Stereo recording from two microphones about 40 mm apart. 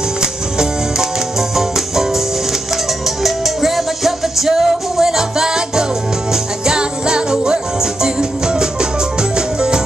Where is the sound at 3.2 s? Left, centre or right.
Centre.